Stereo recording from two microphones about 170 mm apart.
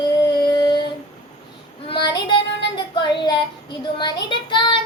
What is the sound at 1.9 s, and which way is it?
Child singing, 30° left (ahead or behind).